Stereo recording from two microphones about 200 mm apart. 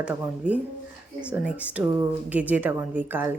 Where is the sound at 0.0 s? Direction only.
5° right (ahead or behind).